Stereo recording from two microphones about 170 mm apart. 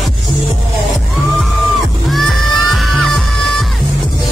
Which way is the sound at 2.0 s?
Centre (ahead or behind).